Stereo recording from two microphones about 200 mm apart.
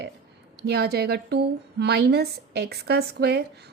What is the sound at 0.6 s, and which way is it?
A woman's voice, 55° right (ahead or behind).